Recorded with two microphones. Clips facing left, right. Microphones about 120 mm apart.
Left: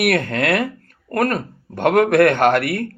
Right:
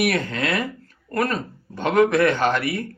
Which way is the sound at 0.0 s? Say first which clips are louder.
Left 4 dB; 55° left (ahead or behind).